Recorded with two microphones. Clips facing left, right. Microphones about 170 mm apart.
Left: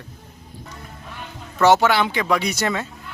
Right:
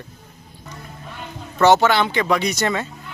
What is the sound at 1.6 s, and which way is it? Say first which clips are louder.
Speech: right 1 dB; 10° left (ahead or behind).